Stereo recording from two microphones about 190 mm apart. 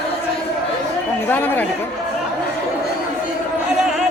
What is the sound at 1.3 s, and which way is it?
Speech, 10° left (ahead or behind).